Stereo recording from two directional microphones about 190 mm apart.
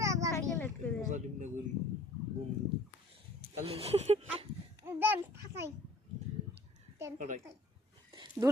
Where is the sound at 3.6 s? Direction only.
30° right (ahead or behind).